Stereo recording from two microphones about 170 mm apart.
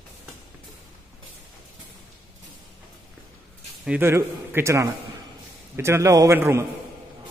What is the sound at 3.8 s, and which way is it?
A man's voice, 10° right (ahead or behind).